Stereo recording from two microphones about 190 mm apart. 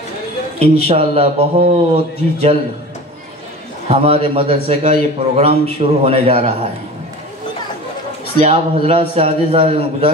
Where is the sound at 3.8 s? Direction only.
30° right (ahead or behind).